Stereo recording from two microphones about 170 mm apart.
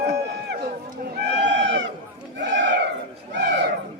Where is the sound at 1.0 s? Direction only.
75° right (ahead or behind).